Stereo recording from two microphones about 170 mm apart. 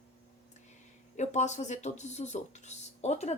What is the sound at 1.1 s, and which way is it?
A woman's voice, 45° left (ahead or behind).